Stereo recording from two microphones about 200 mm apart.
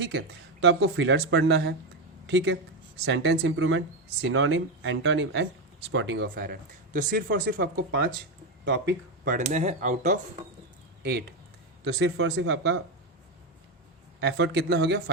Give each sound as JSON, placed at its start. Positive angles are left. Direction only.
{"t": 0.0, "sound": "speech", "side_deg": -65}
{"t": 9.3, "sound": "speech", "side_deg": -35}
{"t": 11.9, "sound": "speech", "side_deg": -60}
{"t": 14.2, "sound": "speech", "side_deg": -60}